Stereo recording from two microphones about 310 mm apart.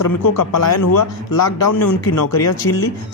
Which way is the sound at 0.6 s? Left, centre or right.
Left.